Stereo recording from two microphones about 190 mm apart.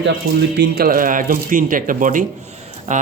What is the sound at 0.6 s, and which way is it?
Speech, 50° right (ahead or behind).